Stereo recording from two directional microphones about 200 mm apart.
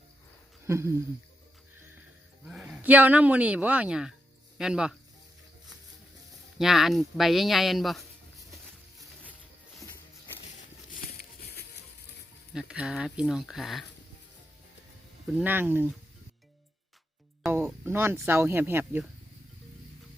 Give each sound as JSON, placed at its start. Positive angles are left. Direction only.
{"t": 0.6, "sound": "speech", "side_deg": -15}
{"t": 2.4, "sound": "speech", "side_deg": 0}
{"t": 6.6, "sound": "speech", "side_deg": 0}
{"t": 10.9, "sound": "a sound", "side_deg": 50}
{"t": 12.5, "sound": "speech", "side_deg": -5}
{"t": 15.4, "sound": "speech", "side_deg": -10}
{"t": 17.4, "sound": "speech", "side_deg": -5}